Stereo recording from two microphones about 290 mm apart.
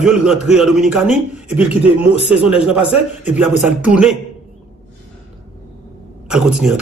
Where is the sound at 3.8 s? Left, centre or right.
Centre.